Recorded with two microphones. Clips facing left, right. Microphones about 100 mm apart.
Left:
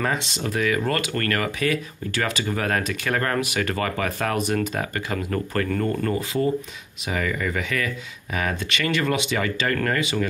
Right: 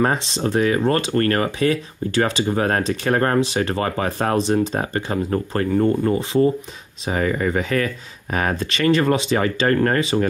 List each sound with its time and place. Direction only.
0.0 s speech: 35° right (ahead or behind)